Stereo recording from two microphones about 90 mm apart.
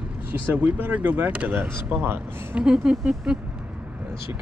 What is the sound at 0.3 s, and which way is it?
Speech, 20° right (ahead or behind).